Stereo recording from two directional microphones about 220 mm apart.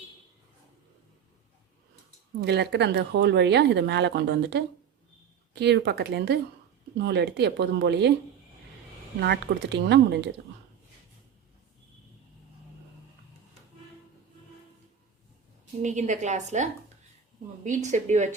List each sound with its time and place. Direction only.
2.4 s speech: 50° right (ahead or behind)
9.2 s speech: 50° right (ahead or behind)
15.8 s a woman's voice: 35° right (ahead or behind)
17.8 s a woman's voice: 35° right (ahead or behind)